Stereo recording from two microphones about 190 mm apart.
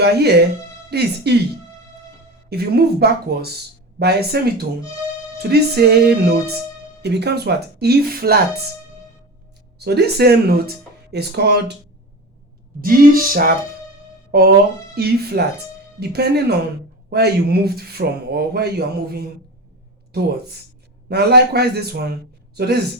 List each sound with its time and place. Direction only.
0.0 s speech: 60° right (ahead or behind)
2.5 s speech: 55° right (ahead or behind)
9.7 s speech: 60° right (ahead or behind)
12.8 s a sound: 50° right (ahead or behind)
14.3 s speech: 55° right (ahead or behind)
21.1 s speech: 60° right (ahead or behind)